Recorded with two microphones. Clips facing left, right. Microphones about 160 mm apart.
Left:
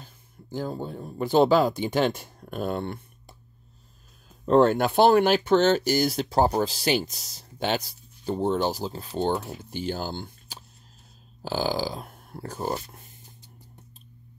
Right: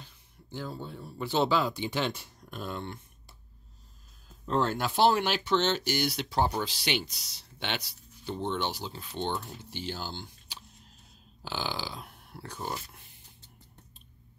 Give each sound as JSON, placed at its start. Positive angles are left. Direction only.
{"t": 0.0, "sound": "speech", "side_deg": 45}
{"t": 4.5, "sound": "speech", "side_deg": 60}